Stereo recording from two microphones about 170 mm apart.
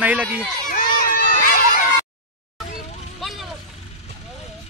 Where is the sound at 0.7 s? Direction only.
55° left (ahead or behind).